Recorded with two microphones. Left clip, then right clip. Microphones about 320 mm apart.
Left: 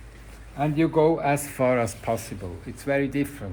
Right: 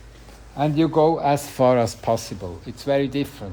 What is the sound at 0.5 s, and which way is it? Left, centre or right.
Speech, right.